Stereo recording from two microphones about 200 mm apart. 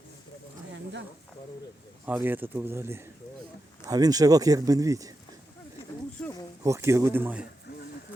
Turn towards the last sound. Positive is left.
turn(degrees=-10)  # may be behind; listen again after turning